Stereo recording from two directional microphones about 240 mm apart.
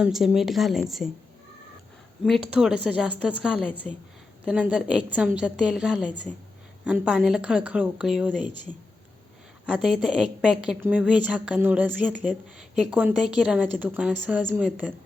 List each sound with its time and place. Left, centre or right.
0.0 s a woman's voice: centre
2.2 s a woman's voice: centre
9.7 s a woman's voice: centre